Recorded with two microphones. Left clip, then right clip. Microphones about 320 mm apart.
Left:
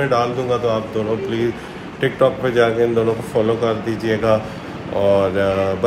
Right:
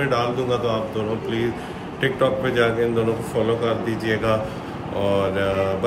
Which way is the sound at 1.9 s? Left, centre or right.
Centre.